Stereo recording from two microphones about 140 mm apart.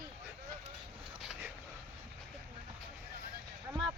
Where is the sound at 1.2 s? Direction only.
5° right (ahead or behind).